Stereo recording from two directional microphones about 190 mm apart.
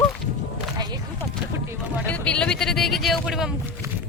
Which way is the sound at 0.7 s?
20° right (ahead or behind).